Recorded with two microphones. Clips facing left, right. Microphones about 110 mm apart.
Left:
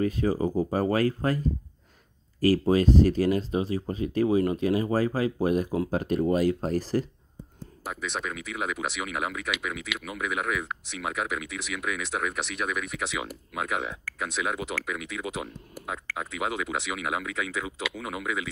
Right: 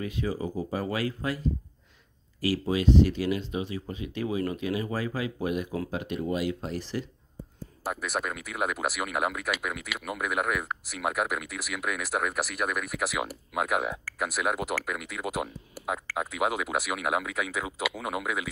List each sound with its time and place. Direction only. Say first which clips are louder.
0.0 s speech: left 6 dB; 40° left (ahead or behind)
2.4 s speech: left 4 dB; 45° left (ahead or behind)
7.8 s speech: right 2 dB; 5° right (ahead or behind)